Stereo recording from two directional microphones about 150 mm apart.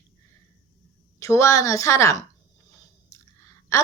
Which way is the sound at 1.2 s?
20° left (ahead or behind).